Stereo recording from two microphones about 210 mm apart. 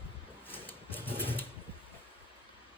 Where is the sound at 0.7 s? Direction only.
10° left (ahead or behind).